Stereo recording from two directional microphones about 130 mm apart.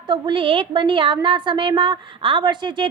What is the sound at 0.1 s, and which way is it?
A woman's voice, 40° right (ahead or behind).